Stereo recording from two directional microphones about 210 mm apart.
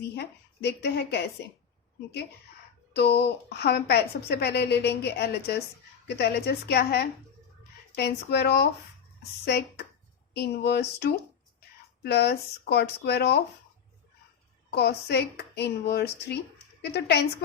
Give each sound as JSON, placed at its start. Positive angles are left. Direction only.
{"t": 0.0, "sound": "a woman's voice", "side_deg": 50}
{"t": 2.9, "sound": "a woman's voice", "side_deg": 50}
{"t": 14.8, "sound": "a woman's voice", "side_deg": 50}